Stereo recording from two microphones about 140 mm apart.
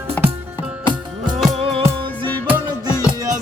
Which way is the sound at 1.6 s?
40° right (ahead or behind).